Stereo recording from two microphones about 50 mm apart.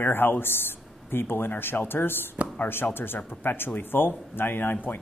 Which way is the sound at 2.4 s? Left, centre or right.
Right.